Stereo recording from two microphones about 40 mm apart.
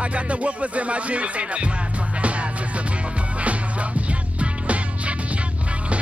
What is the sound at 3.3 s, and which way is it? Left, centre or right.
Music, right.